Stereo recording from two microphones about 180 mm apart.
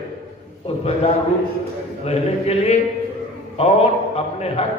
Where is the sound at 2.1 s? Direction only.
35° left (ahead or behind).